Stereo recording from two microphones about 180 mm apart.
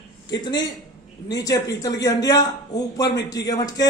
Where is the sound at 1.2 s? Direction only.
20° left (ahead or behind).